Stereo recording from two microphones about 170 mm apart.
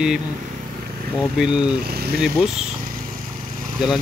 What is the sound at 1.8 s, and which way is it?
Speech, 65° right (ahead or behind).